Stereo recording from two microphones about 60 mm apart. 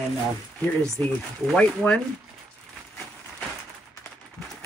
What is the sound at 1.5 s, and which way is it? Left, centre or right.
Speech, centre.